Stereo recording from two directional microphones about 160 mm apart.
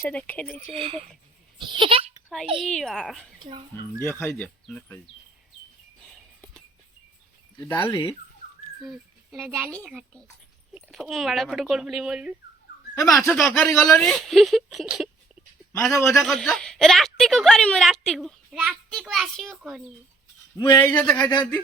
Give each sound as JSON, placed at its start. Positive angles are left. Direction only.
{"t": 0.0, "sound": "speech", "side_deg": 10}
{"t": 0.6, "sound": "speech", "side_deg": -35}
{"t": 2.6, "sound": "a woman's voice", "side_deg": 5}
{"t": 4.0, "sound": "speech", "side_deg": 15}
{"t": 7.6, "sound": "speech", "side_deg": 15}
{"t": 8.8, "sound": "a child's voice", "side_deg": 0}
{"t": 10.8, "sound": "a woman's voice", "side_deg": 0}
{"t": 13.0, "sound": "speech", "side_deg": 20}
{"t": 13.2, "sound": "a woman's voice", "side_deg": 5}
{"t": 15.7, "sound": "speech", "side_deg": 15}
{"t": 16.2, "sound": "a woman's voice", "side_deg": 0}
{"t": 20.6, "sound": "speech", "side_deg": 20}